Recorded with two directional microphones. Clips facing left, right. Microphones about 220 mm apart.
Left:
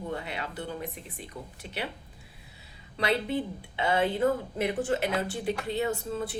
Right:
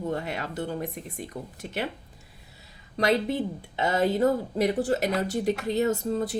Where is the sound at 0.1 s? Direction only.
45° right (ahead or behind).